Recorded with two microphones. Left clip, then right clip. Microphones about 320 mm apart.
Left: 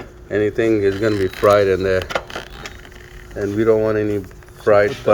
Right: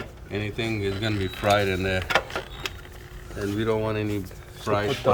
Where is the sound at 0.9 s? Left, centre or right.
Left.